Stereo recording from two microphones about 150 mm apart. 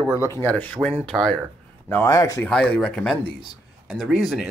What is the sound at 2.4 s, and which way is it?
Speech, 5° left (ahead or behind).